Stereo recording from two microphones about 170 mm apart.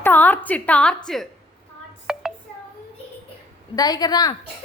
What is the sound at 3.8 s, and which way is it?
Speech, 20° left (ahead or behind).